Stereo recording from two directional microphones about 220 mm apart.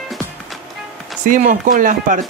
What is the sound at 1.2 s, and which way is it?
Speech, 40° right (ahead or behind).